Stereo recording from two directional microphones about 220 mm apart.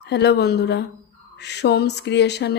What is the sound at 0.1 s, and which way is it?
A woman's voice, 50° left (ahead or behind).